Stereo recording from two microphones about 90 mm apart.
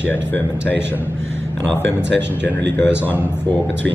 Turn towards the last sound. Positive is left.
turn(degrees=25)  # may be behind; listen again after turning